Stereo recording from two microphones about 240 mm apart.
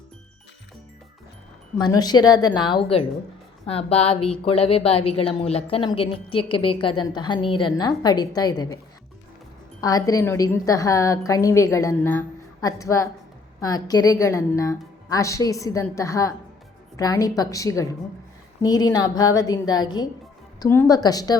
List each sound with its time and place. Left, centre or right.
1.8 s a woman's voice: centre
9.8 s a woman's voice: centre